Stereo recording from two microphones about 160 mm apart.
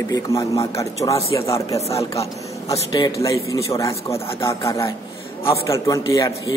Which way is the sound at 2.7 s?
20° left (ahead or behind).